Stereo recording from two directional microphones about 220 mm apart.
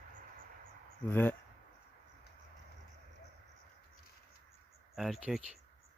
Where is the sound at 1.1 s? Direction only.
10° left (ahead or behind).